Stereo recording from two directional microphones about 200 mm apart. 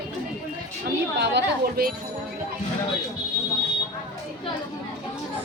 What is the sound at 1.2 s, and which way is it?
Speech, 50° right (ahead or behind).